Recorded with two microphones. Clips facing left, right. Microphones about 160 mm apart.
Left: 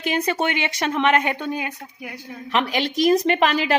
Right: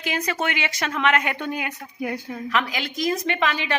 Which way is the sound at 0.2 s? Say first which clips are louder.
Left 2 dB; 25° left (ahead or behind).